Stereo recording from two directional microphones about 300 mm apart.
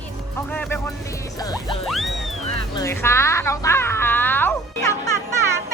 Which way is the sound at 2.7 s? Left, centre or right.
Centre.